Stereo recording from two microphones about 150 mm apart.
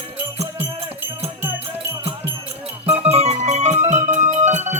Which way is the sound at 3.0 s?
45° right (ahead or behind).